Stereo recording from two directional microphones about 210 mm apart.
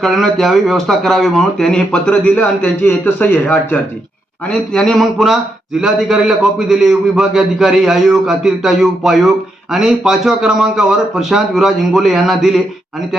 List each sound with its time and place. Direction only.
0.0 s speech: centre (ahead or behind)